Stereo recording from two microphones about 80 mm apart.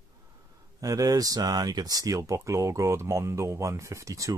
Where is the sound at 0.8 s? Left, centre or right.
Right.